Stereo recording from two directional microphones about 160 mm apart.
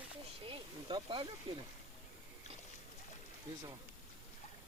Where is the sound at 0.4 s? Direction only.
30° right (ahead or behind).